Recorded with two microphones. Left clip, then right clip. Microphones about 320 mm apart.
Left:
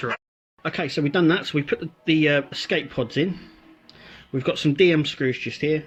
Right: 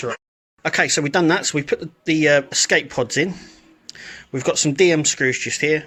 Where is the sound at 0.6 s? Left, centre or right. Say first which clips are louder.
Right 7 dB; right.